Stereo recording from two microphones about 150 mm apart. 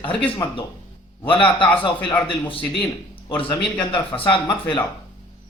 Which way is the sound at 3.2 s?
30° left (ahead or behind).